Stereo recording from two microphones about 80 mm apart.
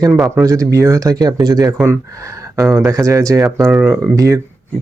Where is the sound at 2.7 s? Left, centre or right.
Right.